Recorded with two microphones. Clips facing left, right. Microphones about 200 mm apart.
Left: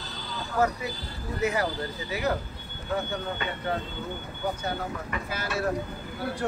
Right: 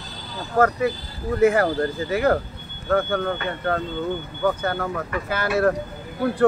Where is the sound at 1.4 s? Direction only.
50° right (ahead or behind).